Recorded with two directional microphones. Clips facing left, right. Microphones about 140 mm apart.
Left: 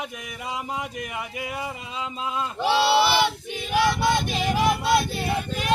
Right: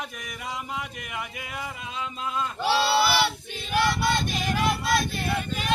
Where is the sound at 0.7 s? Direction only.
30° left (ahead or behind).